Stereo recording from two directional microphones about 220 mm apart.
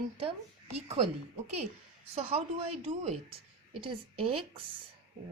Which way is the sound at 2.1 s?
25° right (ahead or behind).